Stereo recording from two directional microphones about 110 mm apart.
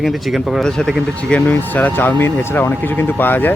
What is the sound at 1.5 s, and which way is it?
Speech, 15° left (ahead or behind).